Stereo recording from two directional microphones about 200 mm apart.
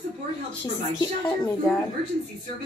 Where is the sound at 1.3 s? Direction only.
5° left (ahead or behind).